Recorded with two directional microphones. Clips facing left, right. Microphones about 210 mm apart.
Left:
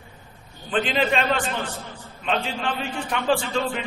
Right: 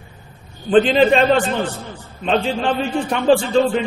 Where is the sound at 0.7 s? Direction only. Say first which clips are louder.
Right 10 dB; 30° right (ahead or behind).